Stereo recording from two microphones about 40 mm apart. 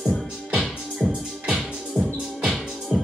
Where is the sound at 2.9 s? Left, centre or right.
Centre.